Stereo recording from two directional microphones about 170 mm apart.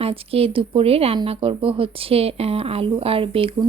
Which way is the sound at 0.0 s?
35° right (ahead or behind).